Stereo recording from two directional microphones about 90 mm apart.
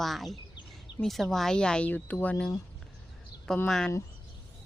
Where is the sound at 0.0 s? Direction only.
Centre (ahead or behind).